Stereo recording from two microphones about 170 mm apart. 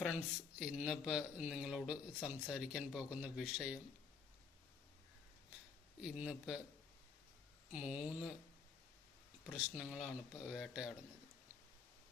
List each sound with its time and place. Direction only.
0.6 s speech: 5° right (ahead or behind)
6.0 s speech: 5° right (ahead or behind)
7.7 s speech: 10° right (ahead or behind)
9.6 s speech: 5° right (ahead or behind)